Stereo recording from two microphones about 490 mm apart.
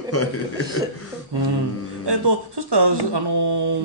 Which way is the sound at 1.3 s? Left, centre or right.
Right.